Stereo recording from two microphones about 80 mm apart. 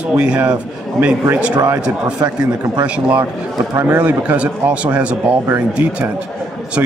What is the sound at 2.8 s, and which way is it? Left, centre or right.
Speech, centre.